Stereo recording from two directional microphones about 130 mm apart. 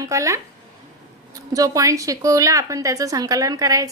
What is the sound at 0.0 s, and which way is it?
Speech, 25° right (ahead or behind).